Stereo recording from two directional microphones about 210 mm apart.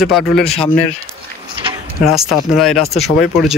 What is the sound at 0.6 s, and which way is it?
Speech, 30° left (ahead or behind).